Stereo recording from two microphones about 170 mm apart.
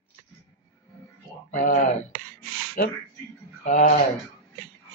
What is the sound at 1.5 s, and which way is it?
A man's voice, 45° left (ahead or behind).